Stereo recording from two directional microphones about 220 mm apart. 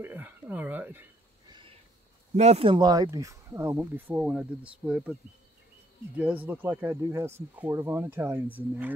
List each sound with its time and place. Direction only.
0.0 s speech: 10° right (ahead or behind)
1.5 s a sound: 25° right (ahead or behind)
2.3 s speech: 30° right (ahead or behind); by 5.1 s 5° right (ahead or behind)
6.1 s speech: 5° right (ahead or behind)